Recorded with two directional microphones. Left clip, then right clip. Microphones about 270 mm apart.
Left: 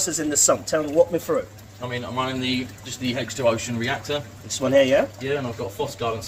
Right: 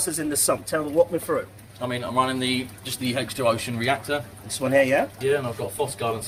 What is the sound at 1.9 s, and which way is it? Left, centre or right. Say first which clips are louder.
Speech: right 3 dB; right.